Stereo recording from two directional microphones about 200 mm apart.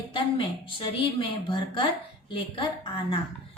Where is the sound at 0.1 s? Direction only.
25° left (ahead or behind).